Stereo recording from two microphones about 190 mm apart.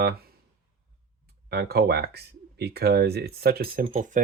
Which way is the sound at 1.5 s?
55° right (ahead or behind).